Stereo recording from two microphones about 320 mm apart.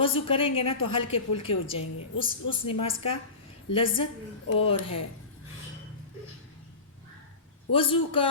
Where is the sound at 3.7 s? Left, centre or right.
Centre.